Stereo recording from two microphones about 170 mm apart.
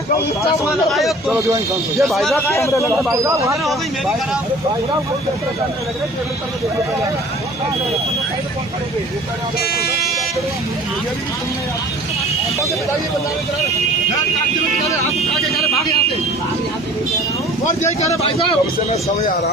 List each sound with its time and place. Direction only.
0.9 s a man's voice: centre (ahead or behind)
1.3 s speech: 20° right (ahead or behind)
2.0 s a man's voice: centre (ahead or behind)
2.5 s a man's voice: 15° left (ahead or behind)
3.1 s speech: 15° right (ahead or behind)
9.6 s speech: 65° left (ahead or behind)
18.2 s speech: 35° left (ahead or behind)